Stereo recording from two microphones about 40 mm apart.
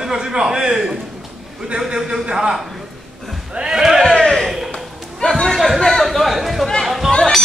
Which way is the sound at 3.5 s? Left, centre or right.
Centre.